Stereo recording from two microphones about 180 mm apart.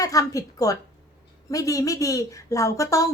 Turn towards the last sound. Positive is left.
turn(degrees=20)  # may be behind; listen again after turning